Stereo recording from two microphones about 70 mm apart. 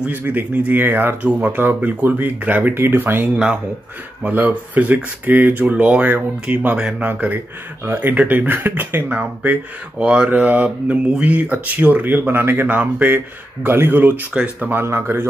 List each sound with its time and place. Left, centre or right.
0.2 s speech: right
9.9 s speech: centre; by 14.2 s right
14.3 s speech: centre
14.7 s speech: right